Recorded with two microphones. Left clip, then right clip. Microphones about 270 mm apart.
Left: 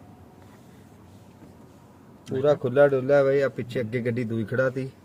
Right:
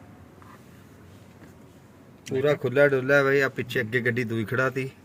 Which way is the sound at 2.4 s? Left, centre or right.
Right.